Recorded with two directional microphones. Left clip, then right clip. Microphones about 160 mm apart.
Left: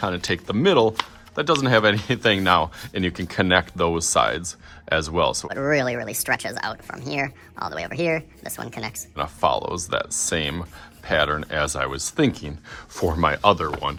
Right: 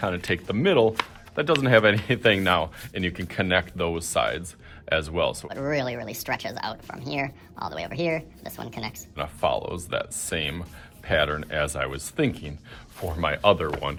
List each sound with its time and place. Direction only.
0.0 s speech: 20° left (ahead or behind)
5.5 s speech: 25° left (ahead or behind)
9.1 s speech: 30° left (ahead or behind)